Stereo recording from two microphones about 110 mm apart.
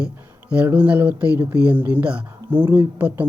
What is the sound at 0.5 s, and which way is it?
Speech, 15° right (ahead or behind).